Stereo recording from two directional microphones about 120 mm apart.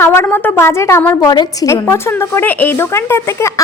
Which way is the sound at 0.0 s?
20° left (ahead or behind).